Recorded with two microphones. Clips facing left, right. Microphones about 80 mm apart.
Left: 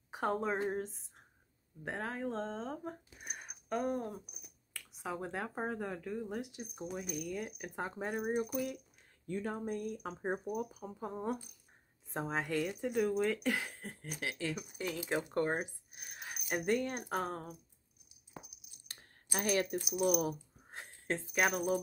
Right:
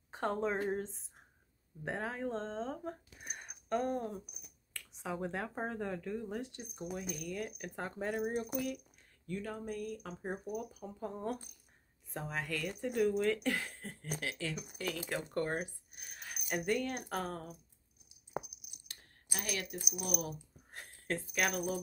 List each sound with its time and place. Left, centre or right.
0.1 s a woman's voice: centre
9.3 s speech: left
12.1 s speech: left
12.8 s speech: centre
18.3 s a sound: centre
18.9 s a sound: left